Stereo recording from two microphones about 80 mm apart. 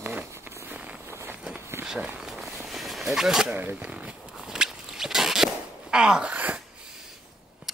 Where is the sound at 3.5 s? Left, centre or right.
Right.